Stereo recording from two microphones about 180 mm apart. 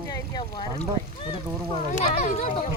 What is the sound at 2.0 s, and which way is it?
Speech, 45° left (ahead or behind).